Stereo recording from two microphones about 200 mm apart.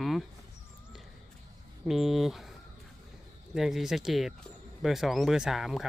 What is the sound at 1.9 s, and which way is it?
Speech, centre (ahead or behind).